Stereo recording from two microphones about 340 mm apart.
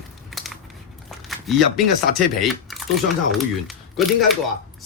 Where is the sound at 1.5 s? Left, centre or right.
Centre.